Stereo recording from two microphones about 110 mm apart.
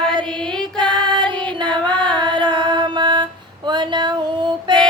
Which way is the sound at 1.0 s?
45° right (ahead or behind).